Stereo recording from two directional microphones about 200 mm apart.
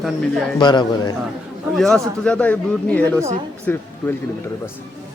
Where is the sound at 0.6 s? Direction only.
20° left (ahead or behind).